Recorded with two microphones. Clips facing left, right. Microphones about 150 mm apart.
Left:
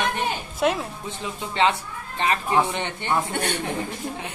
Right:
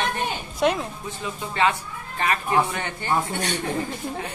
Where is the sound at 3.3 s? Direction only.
55° left (ahead or behind).